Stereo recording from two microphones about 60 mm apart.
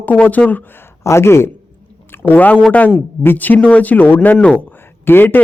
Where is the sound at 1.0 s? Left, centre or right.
Left.